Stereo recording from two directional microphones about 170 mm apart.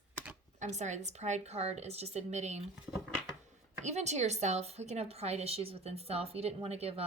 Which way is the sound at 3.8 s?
40° right (ahead or behind).